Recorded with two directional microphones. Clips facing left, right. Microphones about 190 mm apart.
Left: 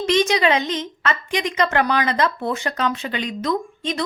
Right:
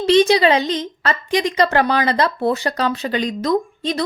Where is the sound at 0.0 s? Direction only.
35° right (ahead or behind).